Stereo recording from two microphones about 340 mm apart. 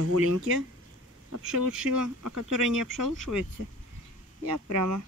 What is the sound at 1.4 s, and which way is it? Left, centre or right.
Speech, right.